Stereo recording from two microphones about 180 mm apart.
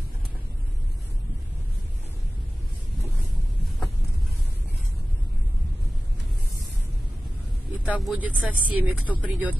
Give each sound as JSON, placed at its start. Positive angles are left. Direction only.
{"t": 7.7, "sound": "speech", "side_deg": -5}